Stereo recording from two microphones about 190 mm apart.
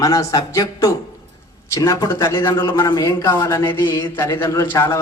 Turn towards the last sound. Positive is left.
turn(degrees=15)  # may be behind; listen again after turning